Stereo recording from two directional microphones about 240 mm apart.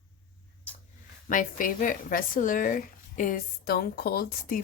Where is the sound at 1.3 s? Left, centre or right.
Left.